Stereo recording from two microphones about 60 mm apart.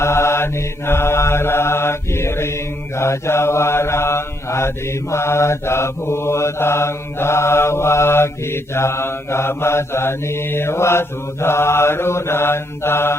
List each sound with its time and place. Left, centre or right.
0.0 s mantra: left